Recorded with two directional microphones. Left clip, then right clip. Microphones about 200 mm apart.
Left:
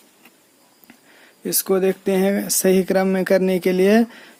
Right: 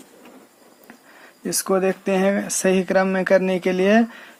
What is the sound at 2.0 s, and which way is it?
Speech, 45° left (ahead or behind).